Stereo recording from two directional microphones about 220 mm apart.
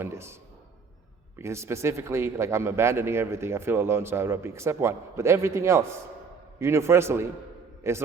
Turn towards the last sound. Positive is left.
turn(degrees=-10)  # may be behind; listen again after turning